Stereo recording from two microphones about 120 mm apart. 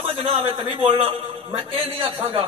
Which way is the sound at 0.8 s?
55° right (ahead or behind).